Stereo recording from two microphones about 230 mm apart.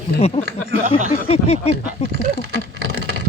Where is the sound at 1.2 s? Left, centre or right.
Left.